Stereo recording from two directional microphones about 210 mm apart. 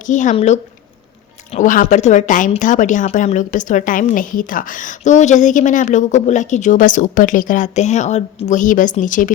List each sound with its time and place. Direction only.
0.0 s a woman's voice: 35° left (ahead or behind)